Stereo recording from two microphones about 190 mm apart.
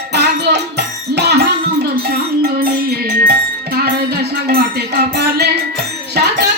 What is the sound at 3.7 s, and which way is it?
Music, 55° right (ahead or behind).